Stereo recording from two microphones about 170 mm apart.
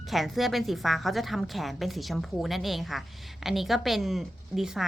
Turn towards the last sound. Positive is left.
turn(degrees=0)  # may be behind; listen again after turning